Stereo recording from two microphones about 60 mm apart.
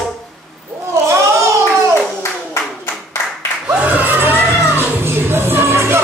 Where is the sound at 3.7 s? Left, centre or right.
Right.